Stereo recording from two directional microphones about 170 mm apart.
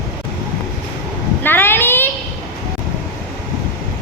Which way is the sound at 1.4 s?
10° left (ahead or behind).